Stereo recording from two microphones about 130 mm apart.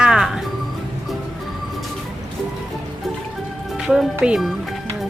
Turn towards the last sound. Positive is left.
turn(degrees=-5)  # may be behind; listen again after turning